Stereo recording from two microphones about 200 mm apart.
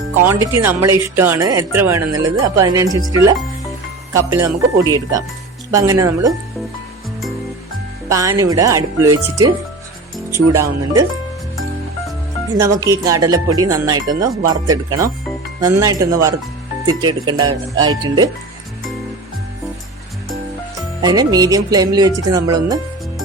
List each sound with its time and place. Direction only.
0.2 s speech: 10° right (ahead or behind)
8.1 s speech: 15° right (ahead or behind)
12.5 s speech: 15° right (ahead or behind)
17.0 s music: 20° right (ahead or behind)
21.0 s music: 20° right (ahead or behind)